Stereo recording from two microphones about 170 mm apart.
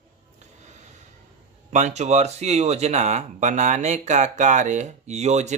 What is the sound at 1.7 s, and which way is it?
Speech, 40° right (ahead or behind).